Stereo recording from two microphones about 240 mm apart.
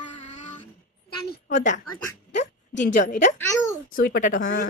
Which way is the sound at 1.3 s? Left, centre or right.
Left.